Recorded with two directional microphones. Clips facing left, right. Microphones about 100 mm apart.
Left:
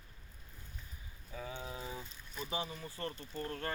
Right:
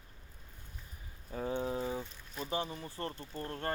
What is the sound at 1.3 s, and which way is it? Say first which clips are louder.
Speech: right 9 dB; 40° right (ahead or behind).